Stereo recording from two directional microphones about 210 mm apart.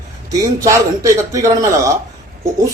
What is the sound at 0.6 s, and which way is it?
A man's voice, 15° right (ahead or behind).